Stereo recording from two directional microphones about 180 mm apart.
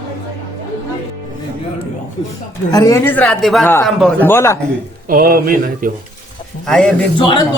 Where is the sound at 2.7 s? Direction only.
15° left (ahead or behind); by 4.3 s centre (ahead or behind).